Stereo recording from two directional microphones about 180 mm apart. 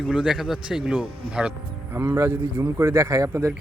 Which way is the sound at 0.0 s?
5° right (ahead or behind).